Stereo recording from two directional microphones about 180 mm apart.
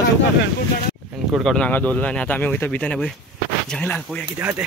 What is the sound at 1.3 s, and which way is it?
Speech, centre (ahead or behind).